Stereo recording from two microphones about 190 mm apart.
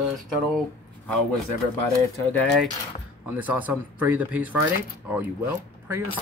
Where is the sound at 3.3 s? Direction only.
10° right (ahead or behind).